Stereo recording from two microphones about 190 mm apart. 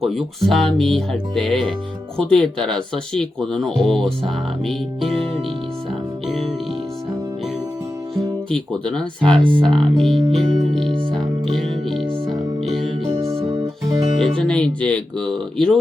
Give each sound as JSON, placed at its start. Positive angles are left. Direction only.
{"t": 0.0, "sound": "speech", "side_deg": 0}
{"t": 6.2, "sound": "music", "side_deg": 0}
{"t": 8.1, "sound": "speech", "side_deg": 5}
{"t": 11.5, "sound": "music", "side_deg": 0}
{"t": 13.1, "sound": "music", "side_deg": -20}
{"t": 14.3, "sound": "speech", "side_deg": 5}